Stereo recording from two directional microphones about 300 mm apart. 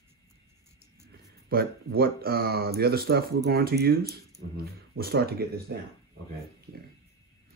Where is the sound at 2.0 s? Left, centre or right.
Right.